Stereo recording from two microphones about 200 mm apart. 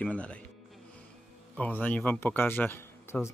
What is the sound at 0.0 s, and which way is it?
Speech, 5° left (ahead or behind).